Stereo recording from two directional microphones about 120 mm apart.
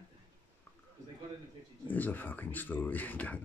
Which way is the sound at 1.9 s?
15° left (ahead or behind).